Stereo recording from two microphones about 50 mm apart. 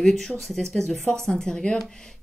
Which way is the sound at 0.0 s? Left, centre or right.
Centre.